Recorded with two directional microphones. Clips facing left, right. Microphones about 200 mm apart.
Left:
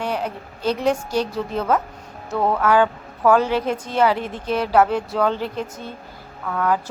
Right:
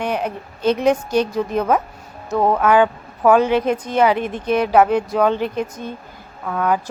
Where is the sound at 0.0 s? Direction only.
20° right (ahead or behind).